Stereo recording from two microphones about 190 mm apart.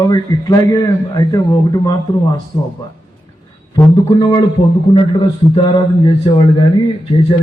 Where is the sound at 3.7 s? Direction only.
25° left (ahead or behind).